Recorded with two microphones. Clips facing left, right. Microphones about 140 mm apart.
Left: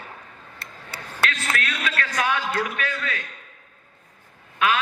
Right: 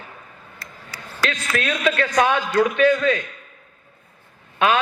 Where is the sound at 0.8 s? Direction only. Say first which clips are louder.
Right 1 dB; 60° left (ahead or behind).